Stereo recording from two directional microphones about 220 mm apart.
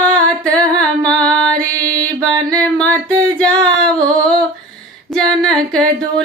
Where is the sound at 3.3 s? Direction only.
5° left (ahead or behind).